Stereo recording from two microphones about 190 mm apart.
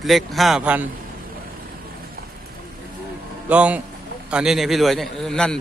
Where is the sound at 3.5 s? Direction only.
5° right (ahead or behind).